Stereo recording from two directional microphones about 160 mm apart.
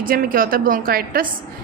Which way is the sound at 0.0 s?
65° right (ahead or behind).